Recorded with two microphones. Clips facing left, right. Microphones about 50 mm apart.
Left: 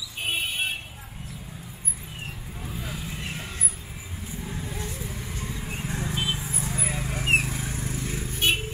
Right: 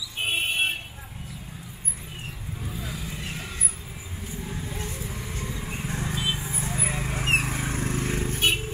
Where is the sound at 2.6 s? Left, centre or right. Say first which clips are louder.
Even; centre.